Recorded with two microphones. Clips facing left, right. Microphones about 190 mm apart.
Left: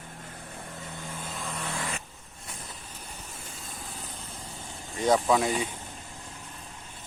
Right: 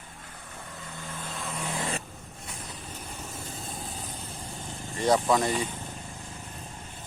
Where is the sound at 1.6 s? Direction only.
20° right (ahead or behind).